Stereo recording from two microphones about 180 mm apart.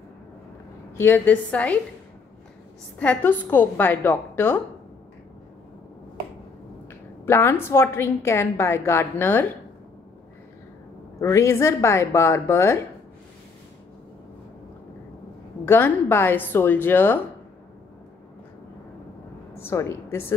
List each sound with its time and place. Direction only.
0.9 s a woman's voice: 10° left (ahead or behind)
3.0 s a woman's voice: 10° left (ahead or behind)
6.9 s a woman's voice: 10° left (ahead or behind)
11.1 s a woman's voice: 15° left (ahead or behind)
15.6 s a woman's voice: 10° left (ahead or behind)
19.5 s a woman's voice: 15° left (ahead or behind)